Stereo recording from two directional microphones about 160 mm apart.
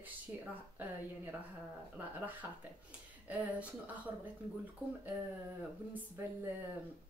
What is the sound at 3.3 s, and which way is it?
Speech, 10° right (ahead or behind).